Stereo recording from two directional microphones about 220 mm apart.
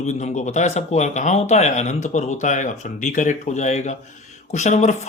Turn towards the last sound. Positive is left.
turn(degrees=35)  # may be behind; listen again after turning